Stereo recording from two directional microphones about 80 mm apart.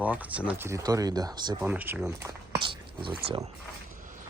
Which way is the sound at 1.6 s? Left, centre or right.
Right.